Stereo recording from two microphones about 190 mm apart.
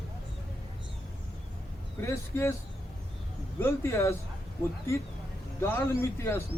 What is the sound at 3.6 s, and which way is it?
Speech, 15° left (ahead or behind).